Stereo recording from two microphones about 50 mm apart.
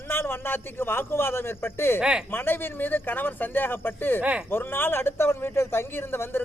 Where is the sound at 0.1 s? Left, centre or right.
Left.